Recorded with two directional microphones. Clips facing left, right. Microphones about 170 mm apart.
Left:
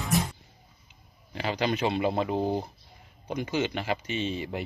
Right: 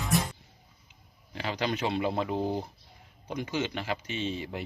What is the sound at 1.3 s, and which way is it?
Speech, 5° left (ahead or behind).